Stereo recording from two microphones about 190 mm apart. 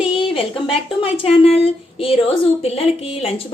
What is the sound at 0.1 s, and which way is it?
A woman's voice, 25° left (ahead or behind).